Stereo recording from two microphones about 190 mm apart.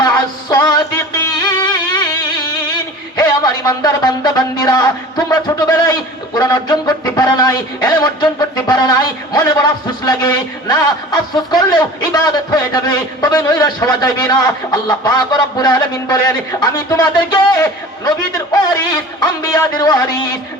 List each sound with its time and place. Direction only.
0.0 s music: 20° left (ahead or behind)
10.1 s a man's voice: 20° left (ahead or behind)
19.5 s a man's voice: 20° left (ahead or behind)